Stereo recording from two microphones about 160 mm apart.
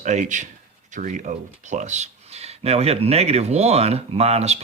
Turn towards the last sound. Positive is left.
turn(degrees=-40)  # may be behind; listen again after turning